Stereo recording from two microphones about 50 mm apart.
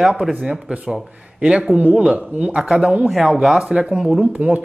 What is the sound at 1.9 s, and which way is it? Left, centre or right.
A man's voice, centre.